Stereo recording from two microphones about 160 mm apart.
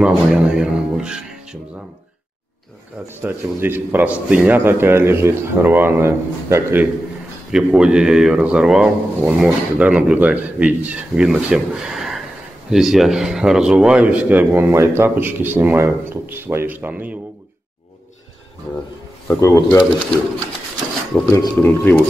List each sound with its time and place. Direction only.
0.0 s speech: 5° right (ahead or behind)
3.2 s speech: 15° right (ahead or behind)
19.2 s speech: 20° left (ahead or behind)
21.3 s speech: 15° left (ahead or behind)